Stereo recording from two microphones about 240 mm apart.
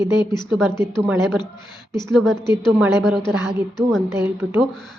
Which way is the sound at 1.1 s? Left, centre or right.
Centre.